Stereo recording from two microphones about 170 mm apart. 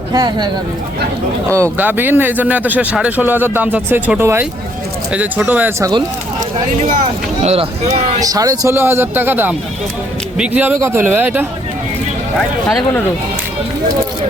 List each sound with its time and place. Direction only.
0.1 s speech: 25° right (ahead or behind)
1.8 s a man's voice: 10° right (ahead or behind)
7.4 s speech: 35° right (ahead or behind)
8.2 s a man's voice: 20° right (ahead or behind)
12.6 s speech: 5° left (ahead or behind)